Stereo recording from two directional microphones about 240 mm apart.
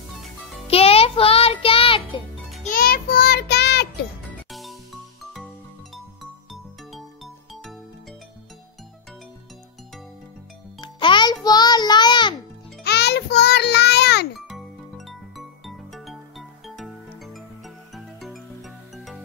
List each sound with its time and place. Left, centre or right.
0.7 s music: left
2.6 s child singing: left
4.5 s music: centre
6.5 s music: centre
10.8 s music: centre
12.8 s music: left
14.5 s music: centre